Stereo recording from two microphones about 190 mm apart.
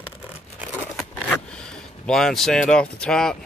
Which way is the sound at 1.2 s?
5° left (ahead or behind).